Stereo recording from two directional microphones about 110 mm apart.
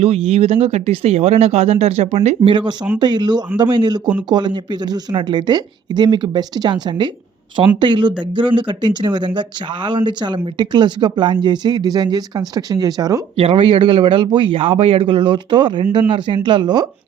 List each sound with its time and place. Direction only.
0.0 s a woman's voice: 65° right (ahead or behind); by 13.2 s 35° right (ahead or behind)
13.3 s speech: 65° right (ahead or behind); by 16.8 s 45° right (ahead or behind)